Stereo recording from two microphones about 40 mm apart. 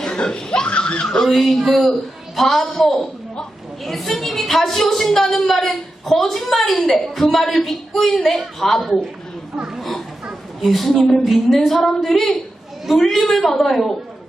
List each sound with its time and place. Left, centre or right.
0.0 s a sound: left
0.3 s speech: centre
1.0 s a woman's voice: centre
10.6 s a woman's voice: centre